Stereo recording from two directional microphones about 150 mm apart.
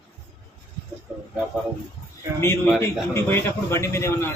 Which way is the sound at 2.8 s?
15° left (ahead or behind).